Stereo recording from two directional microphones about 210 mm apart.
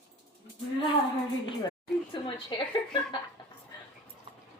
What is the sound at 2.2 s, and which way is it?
Speech, 25° left (ahead or behind).